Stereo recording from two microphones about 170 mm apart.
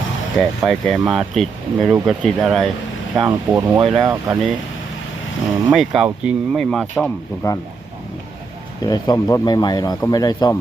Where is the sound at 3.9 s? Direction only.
20° right (ahead or behind).